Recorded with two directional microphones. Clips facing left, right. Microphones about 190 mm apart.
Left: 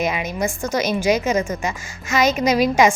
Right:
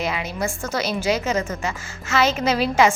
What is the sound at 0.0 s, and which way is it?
A woman's voice, 20° left (ahead or behind).